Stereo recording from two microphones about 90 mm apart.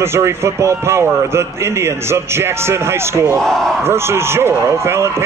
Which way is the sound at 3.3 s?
5° left (ahead or behind).